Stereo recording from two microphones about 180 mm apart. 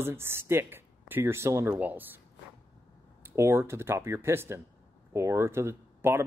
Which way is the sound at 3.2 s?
15° right (ahead or behind).